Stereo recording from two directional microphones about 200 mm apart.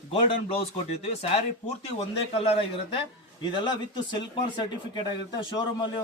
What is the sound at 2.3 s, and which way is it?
A man's voice, 30° left (ahead or behind).